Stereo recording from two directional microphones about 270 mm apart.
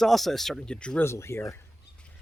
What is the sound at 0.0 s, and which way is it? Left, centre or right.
Speech, centre.